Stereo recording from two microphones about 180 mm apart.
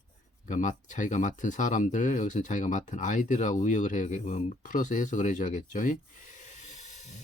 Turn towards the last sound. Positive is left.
turn(degrees=40)  # may be behind; listen again after turning